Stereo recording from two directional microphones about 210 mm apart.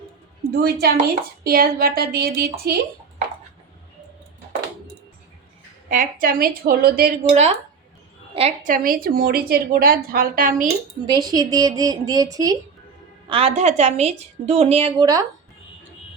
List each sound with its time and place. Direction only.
0.5 s a woman's voice: 50° right (ahead or behind)
5.9 s a woman's voice: 40° right (ahead or behind)
8.3 s a woman's voice: 30° right (ahead or behind)
11.0 s a woman's voice: 20° right (ahead or behind)